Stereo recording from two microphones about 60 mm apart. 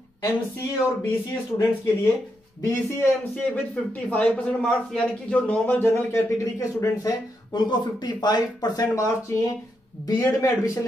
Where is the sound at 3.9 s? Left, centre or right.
Left.